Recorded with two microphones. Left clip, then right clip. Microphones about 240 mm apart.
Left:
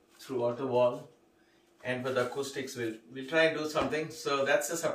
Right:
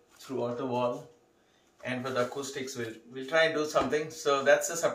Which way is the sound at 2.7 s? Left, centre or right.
Centre.